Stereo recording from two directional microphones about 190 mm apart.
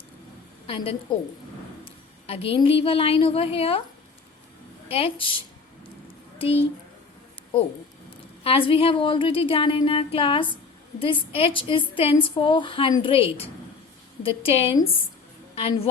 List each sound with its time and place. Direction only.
0.7 s a woman's voice: 30° left (ahead or behind)
4.9 s a woman's voice: 30° left (ahead or behind)
6.4 s a woman's voice: 30° left (ahead or behind)
8.4 s a woman's voice: 30° left (ahead or behind)